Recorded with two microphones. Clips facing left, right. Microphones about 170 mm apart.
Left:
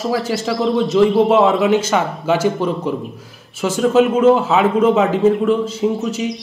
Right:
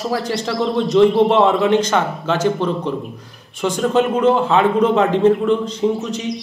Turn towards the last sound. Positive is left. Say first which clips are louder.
# left 2 dB
turn(degrees=5)  # may be behind; listen again after turning